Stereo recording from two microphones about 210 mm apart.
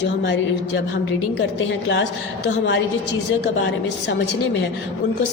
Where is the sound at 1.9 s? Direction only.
55° left (ahead or behind).